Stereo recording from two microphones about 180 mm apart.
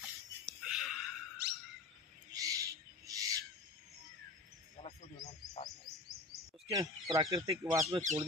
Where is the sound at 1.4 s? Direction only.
65° right (ahead or behind).